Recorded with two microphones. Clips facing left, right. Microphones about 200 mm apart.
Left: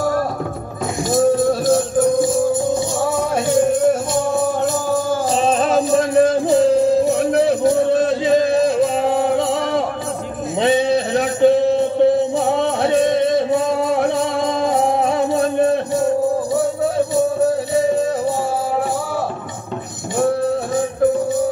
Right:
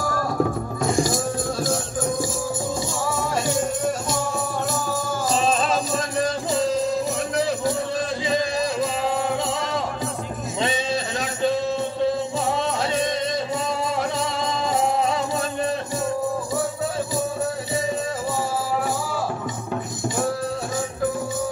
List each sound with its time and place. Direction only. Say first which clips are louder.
0.9 s music: left 11 dB; 60° left (ahead or behind)
4.9 s music: left 6 dB; 60° left (ahead or behind)